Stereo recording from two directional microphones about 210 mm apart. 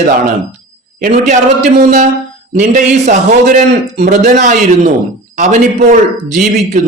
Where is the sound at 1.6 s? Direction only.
35° right (ahead or behind).